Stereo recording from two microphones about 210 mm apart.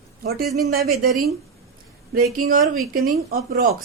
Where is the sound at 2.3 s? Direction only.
40° right (ahead or behind).